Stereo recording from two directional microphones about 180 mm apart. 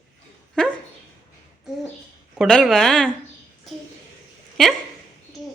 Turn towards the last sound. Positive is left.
turn(degrees=0)  # may be behind; listen again after turning